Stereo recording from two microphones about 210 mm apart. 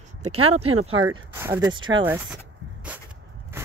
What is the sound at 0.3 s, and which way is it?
Speech, 90° right.